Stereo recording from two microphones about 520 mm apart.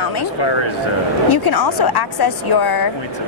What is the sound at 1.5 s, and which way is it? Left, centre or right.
Speech, left.